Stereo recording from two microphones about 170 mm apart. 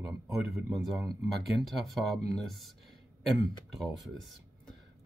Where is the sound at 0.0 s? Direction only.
20° right (ahead or behind).